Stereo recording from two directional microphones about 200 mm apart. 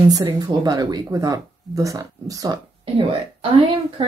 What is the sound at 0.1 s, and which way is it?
Speech, 20° right (ahead or behind).